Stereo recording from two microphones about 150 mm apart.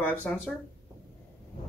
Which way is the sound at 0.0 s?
10° left (ahead or behind).